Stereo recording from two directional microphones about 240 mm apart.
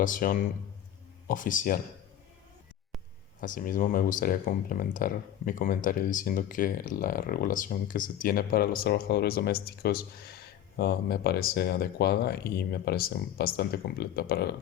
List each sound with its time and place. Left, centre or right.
0.0 s speech: left
3.4 s speech: left